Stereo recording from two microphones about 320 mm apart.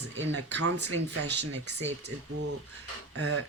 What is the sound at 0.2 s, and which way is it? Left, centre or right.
Speech, right.